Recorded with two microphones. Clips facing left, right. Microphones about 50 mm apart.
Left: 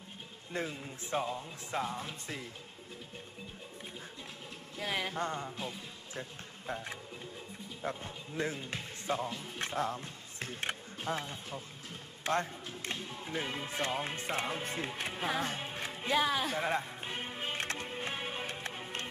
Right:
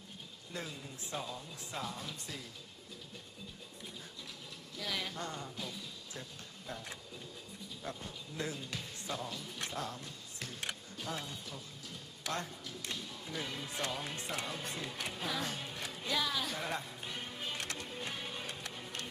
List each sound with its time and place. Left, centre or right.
0.5 s speech: left
4.8 s speech: left